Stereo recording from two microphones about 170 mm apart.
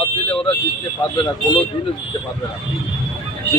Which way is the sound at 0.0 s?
30° left (ahead or behind).